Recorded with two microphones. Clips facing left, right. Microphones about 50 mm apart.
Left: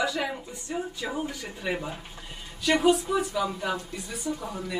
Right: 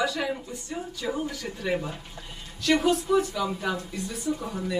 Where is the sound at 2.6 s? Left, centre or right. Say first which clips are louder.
Even; centre.